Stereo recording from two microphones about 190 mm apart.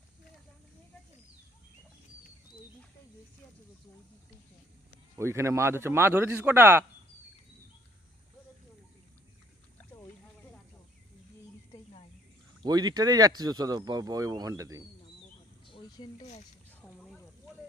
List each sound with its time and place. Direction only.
5.1 s speech: 15° right (ahead or behind)
12.6 s speech: 20° right (ahead or behind)
15.6 s a sound: 25° left (ahead or behind)